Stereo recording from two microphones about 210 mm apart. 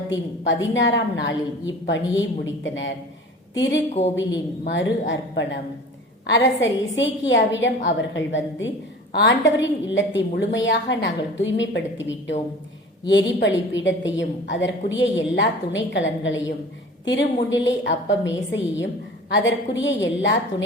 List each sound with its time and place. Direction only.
0.1 s a woman's voice: 60° left (ahead or behind)